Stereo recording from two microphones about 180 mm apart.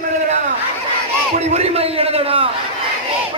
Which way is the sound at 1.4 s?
35° right (ahead or behind).